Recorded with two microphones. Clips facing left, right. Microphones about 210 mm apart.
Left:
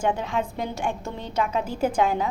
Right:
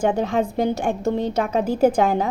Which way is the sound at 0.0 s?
40° right (ahead or behind).